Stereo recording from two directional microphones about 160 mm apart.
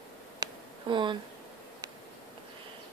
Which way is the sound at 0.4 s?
30° right (ahead or behind).